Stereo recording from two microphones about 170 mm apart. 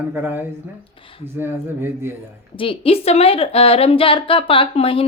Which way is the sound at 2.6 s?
35° left (ahead or behind).